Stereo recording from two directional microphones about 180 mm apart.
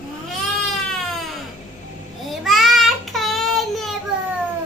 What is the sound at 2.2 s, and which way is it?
Child singing, centre (ahead or behind).